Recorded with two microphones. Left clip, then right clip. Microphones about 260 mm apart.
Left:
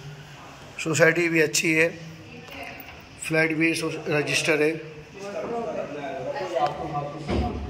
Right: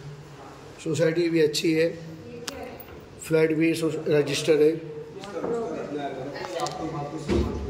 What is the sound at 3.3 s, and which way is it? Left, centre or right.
A man's voice, centre.